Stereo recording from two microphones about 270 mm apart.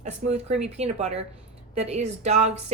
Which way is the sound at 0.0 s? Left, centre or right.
Right.